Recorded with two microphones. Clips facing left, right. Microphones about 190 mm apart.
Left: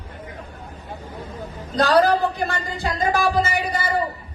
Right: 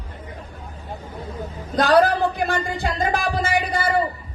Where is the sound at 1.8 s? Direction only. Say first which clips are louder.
Even; 55° right (ahead or behind).